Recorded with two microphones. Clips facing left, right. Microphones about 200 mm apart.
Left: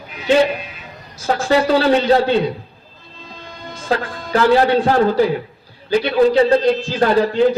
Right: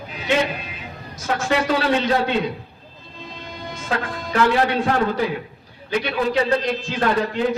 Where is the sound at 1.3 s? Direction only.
35° left (ahead or behind).